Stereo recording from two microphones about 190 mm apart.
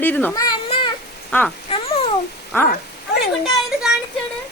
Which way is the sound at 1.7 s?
30° left (ahead or behind).